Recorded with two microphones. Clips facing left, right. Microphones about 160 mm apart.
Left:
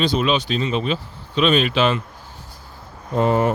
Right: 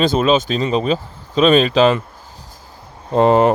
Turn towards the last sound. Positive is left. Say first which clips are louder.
# right 6 dB
turn(degrees=-90)